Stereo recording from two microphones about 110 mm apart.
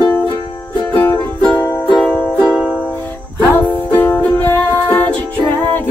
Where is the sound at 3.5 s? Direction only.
20° left (ahead or behind).